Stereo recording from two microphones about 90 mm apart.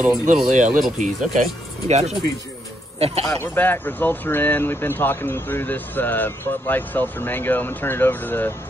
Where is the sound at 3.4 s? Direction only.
20° left (ahead or behind).